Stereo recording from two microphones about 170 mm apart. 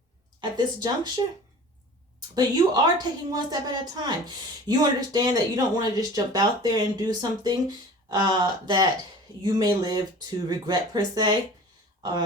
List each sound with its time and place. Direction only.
0.5 s speech: 25° right (ahead or behind)
2.3 s speech: 25° right (ahead or behind)